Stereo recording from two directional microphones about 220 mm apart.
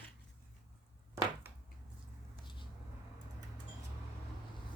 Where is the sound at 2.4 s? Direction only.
20° left (ahead or behind).